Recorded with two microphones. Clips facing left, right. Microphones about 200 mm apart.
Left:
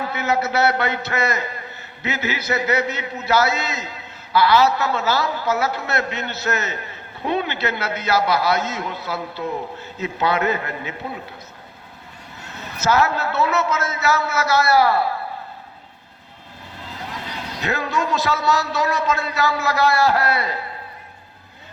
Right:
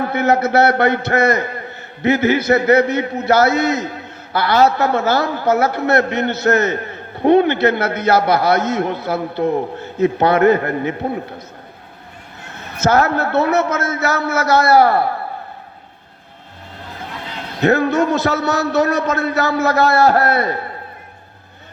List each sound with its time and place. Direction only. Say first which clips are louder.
0.0 s a man's voice: right 6 dB; 55° right (ahead or behind)
13.1 s a man's voice: right 5 dB; 55° right (ahead or behind)
17.6 s a man's voice: right 10 dB; 60° right (ahead or behind)